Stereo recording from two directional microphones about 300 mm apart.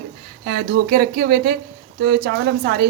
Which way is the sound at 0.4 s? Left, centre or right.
Right.